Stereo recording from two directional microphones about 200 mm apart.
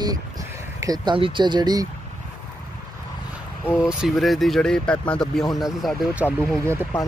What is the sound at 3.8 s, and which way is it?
Speech, centre (ahead or behind).